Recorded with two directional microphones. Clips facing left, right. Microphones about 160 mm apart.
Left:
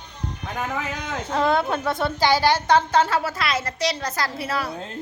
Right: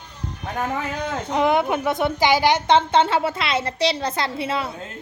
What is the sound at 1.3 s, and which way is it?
A woman's voice, 15° right (ahead or behind).